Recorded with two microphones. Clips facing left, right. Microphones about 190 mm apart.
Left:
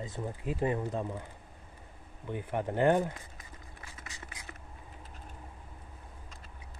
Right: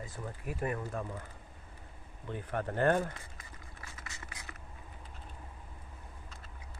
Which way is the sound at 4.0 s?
15° left (ahead or behind).